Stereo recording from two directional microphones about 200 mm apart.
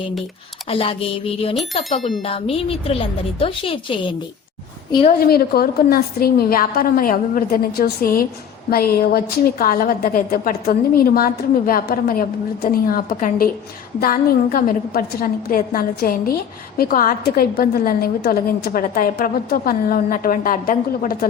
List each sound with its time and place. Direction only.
0.7 s a woman's voice: 30° left (ahead or behind)
2.0 s speech: centre (ahead or behind)
2.2 s a woman's voice: 30° left (ahead or behind)
5.2 s a woman's voice: 50° left (ahead or behind)